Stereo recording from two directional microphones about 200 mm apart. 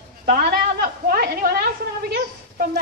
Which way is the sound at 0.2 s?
50° right (ahead or behind).